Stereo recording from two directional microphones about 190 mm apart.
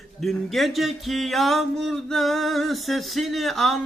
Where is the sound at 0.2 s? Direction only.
Centre (ahead or behind).